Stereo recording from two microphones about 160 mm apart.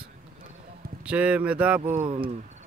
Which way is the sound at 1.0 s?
10° right (ahead or behind).